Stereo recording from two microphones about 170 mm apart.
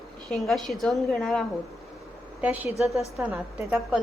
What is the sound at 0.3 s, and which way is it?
A woman's voice, centre (ahead or behind).